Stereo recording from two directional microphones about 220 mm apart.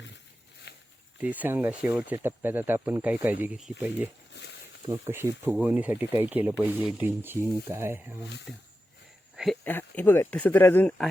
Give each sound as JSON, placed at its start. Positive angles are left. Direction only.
{"t": 0.7, "sound": "walk", "side_deg": 50}
{"t": 1.2, "sound": "speech", "side_deg": -5}
{"t": 4.3, "sound": "speech", "side_deg": 50}
{"t": 4.9, "sound": "speech", "side_deg": -10}
{"t": 9.3, "sound": "a sound", "side_deg": 0}
{"t": 9.6, "sound": "speech", "side_deg": 10}